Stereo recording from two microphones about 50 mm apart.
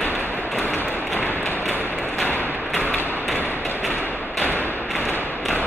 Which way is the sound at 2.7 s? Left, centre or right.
Left.